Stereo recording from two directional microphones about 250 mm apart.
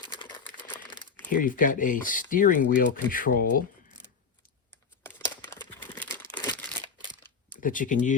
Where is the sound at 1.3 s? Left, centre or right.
Left.